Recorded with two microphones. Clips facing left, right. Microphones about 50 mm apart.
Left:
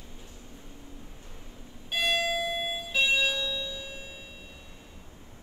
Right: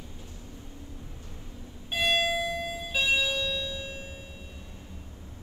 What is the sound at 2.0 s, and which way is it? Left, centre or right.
Alarm clock, right.